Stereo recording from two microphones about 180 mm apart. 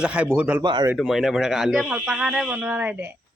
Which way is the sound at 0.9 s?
Centre (ahead or behind).